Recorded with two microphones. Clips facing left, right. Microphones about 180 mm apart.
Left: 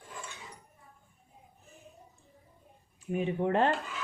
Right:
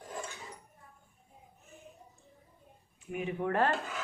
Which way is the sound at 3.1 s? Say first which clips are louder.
Left 3 dB; 25° left (ahead or behind).